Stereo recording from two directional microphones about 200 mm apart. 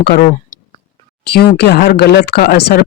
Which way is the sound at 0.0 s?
50° left (ahead or behind).